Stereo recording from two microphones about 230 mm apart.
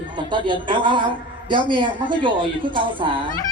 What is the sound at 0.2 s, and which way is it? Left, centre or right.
A man's voice, right.